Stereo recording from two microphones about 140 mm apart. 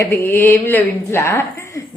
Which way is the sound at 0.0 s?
15° left (ahead or behind).